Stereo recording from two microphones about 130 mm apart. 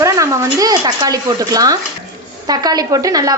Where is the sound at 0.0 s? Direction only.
25° right (ahead or behind).